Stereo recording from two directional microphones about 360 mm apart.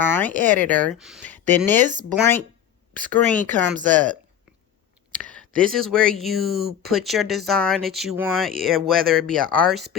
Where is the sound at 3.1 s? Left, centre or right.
Centre.